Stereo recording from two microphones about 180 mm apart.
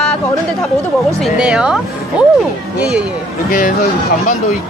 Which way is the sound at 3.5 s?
45° left (ahead or behind).